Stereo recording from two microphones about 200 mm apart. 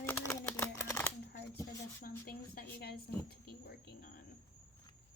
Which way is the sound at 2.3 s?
50° left (ahead or behind).